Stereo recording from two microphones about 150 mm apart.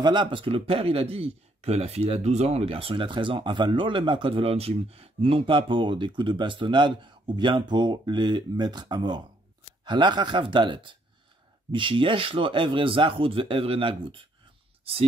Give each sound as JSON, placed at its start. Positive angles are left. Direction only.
{"t": 0.0, "sound": "a man's voice", "side_deg": -30}